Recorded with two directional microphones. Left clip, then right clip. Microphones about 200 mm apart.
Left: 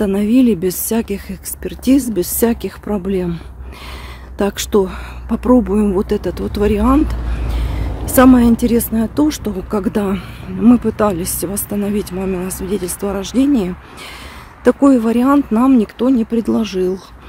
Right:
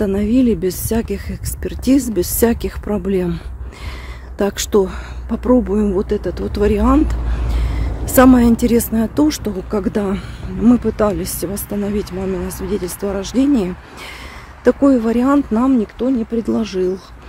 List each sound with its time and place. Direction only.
0.0 s speech: 10° left (ahead or behind)
14.6 s speech: 10° left (ahead or behind)